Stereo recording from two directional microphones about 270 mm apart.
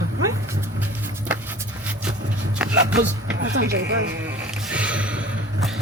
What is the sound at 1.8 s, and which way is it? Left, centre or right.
Vehicle, centre.